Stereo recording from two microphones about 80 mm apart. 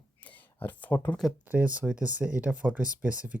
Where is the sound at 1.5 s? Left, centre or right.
Centre.